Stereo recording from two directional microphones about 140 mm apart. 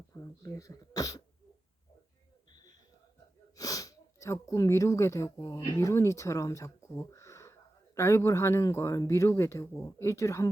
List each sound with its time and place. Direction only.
0.1 s speech: 25° left (ahead or behind)
2.5 s a sound: 30° left (ahead or behind)
3.6 s speech: 25° left (ahead or behind)